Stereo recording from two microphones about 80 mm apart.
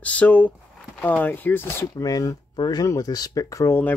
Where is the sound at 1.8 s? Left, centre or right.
Left.